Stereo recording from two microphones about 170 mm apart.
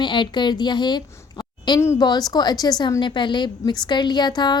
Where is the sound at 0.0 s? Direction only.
25° left (ahead or behind).